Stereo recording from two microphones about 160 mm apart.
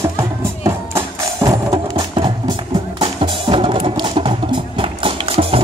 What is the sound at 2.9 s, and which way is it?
Music, 30° right (ahead or behind).